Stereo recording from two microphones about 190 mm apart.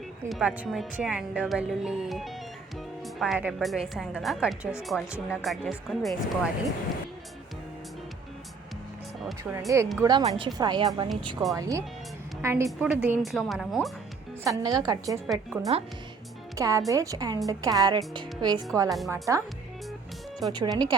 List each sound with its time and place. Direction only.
0.3 s speech: 5° right (ahead or behind)
9.4 s a woman's voice: 15° right (ahead or behind); by 13.9 s centre (ahead or behind)
14.4 s a woman's voice: 20° right (ahead or behind)
15.7 s speech: 30° right (ahead or behind)
16.6 s a woman's voice: 15° right (ahead or behind)
18.9 s speech: centre (ahead or behind)
19.1 s a woman's voice: 15° right (ahead or behind)
20.5 s a woman's voice: 20° right (ahead or behind)